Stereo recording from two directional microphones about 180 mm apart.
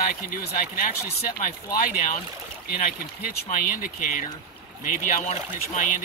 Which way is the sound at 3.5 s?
45° left (ahead or behind).